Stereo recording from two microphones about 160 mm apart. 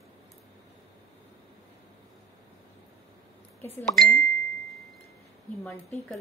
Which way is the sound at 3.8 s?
Centre (ahead or behind).